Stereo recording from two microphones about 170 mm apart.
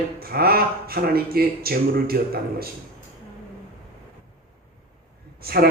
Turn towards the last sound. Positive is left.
turn(degrees=-65)  # may be behind; listen again after turning